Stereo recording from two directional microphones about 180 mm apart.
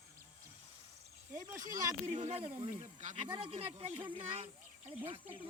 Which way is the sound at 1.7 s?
20° right (ahead or behind).